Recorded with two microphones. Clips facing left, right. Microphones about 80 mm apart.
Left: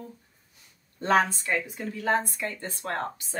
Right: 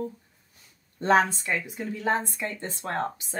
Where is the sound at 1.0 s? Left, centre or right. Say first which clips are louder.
Right 2 dB; right.